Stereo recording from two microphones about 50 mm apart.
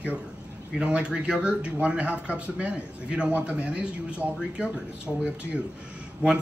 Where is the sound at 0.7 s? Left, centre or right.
Right.